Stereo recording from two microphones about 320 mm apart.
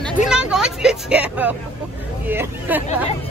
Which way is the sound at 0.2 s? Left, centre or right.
Centre.